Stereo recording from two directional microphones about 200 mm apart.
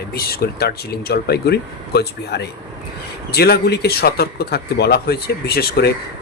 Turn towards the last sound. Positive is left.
turn(degrees=55)  # may be behind; listen again after turning